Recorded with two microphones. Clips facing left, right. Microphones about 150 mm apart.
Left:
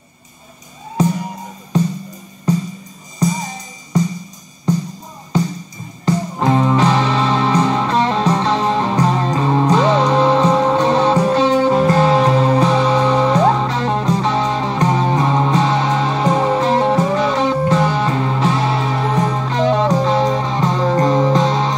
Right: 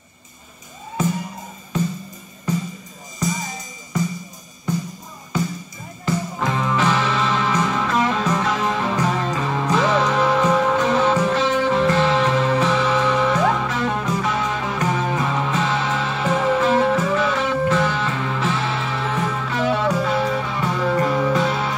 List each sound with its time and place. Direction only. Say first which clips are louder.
3.2 s music: left 6 dB; 35° left (ahead or behind)
6.0 s music: left 6 dB; 35° left (ahead or behind)